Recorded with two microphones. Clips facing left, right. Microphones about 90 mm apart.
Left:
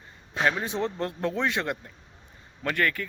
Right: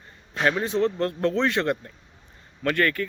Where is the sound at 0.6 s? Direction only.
15° left (ahead or behind).